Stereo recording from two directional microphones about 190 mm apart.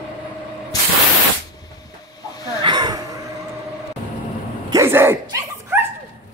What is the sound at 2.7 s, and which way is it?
Gasp, 20° right (ahead or behind).